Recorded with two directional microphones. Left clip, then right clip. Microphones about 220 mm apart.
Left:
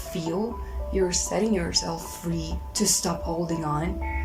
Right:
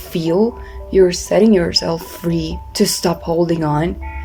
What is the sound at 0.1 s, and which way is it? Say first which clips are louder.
Speech: right 13 dB; 45° right (ahead or behind).